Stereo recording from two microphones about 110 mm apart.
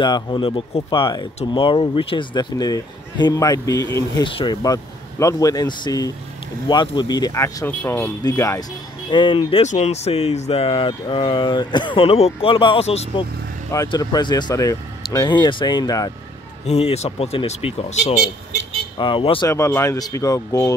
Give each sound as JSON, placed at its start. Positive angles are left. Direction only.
{"t": 0.0, "sound": "speech", "side_deg": 45}
{"t": 4.2, "sound": "speech", "side_deg": 45}
{"t": 5.2, "sound": "speech", "side_deg": 30}
{"t": 8.2, "sound": "speech", "side_deg": 30}
{"t": 9.1, "sound": "speech", "side_deg": 45}
{"t": 9.6, "sound": "speech", "side_deg": 85}
{"t": 13.8, "sound": "speech", "side_deg": 40}
{"t": 16.6, "sound": "speech", "side_deg": 70}
{"t": 18.9, "sound": "speech", "side_deg": 50}
{"t": 19.5, "sound": "speech", "side_deg": 25}